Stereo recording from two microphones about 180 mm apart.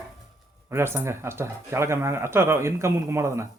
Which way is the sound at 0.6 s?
15° right (ahead or behind).